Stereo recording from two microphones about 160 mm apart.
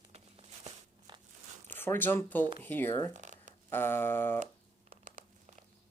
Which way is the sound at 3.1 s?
50° right (ahead or behind).